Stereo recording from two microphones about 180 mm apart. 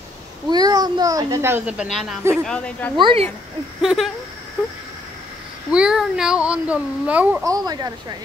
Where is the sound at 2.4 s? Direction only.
5° left (ahead or behind).